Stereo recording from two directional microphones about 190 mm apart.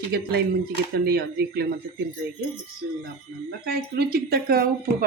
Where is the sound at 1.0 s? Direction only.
55° right (ahead or behind).